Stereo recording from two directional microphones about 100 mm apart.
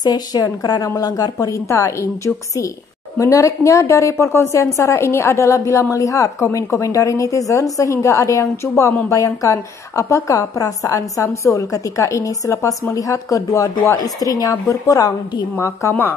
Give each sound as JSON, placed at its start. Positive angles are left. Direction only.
{"t": 0.0, "sound": "a woman's voice", "side_deg": 40}
{"t": 15.9, "sound": "speech", "side_deg": 20}